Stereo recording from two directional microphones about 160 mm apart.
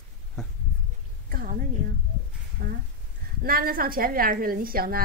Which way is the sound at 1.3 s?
60° right (ahead or behind).